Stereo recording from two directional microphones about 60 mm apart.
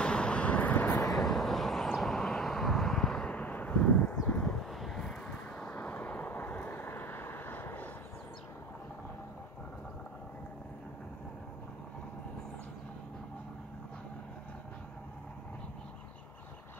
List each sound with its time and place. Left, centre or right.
0.0 s vehicle: centre
0.9 s vehicle: left
1.2 s vehicle: centre
3.3 s a sound: left
4.6 s vehicle: centre
5.2 s vehicle: left